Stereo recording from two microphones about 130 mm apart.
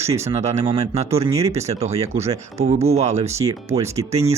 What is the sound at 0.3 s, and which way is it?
Speech, 60° right (ahead or behind).